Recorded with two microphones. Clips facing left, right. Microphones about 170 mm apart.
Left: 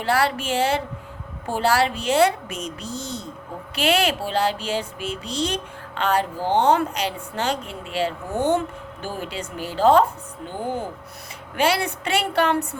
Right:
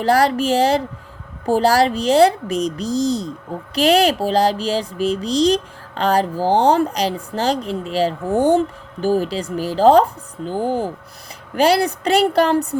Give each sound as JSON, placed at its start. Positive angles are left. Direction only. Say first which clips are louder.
{"t": 0.0, "sound": "speech", "louder": "right 6 dB", "side_deg": -40}
{"t": 8.3, "sound": "speech", "louder": "right 7 dB", "side_deg": -10}
{"t": 8.5, "sound": "speech", "louder": "right 6 dB", "side_deg": -35}